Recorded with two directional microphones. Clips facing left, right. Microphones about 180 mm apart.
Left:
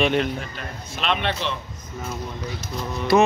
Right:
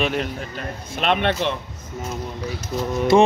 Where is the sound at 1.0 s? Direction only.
50° right (ahead or behind).